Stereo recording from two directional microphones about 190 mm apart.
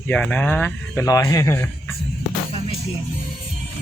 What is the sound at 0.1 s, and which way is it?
Speech, 5° left (ahead or behind).